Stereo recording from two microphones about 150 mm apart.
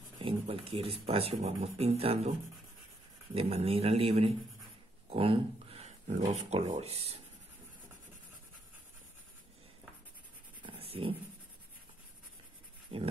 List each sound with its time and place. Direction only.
0.2 s speech: 40° right (ahead or behind)
3.3 s speech: 40° right (ahead or behind)
10.6 s dog: 40° right (ahead or behind)
12.9 s dog: 40° right (ahead or behind)